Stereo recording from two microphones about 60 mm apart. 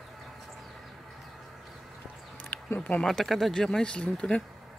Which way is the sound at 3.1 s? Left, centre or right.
Centre.